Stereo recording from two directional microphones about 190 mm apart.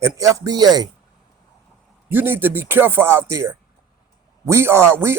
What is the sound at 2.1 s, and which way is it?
A man's voice, 10° right (ahead or behind).